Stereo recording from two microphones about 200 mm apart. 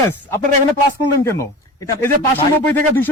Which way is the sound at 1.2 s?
15° left (ahead or behind).